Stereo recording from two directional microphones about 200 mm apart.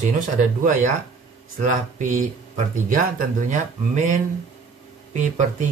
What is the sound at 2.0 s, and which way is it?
Speech, 35° right (ahead or behind).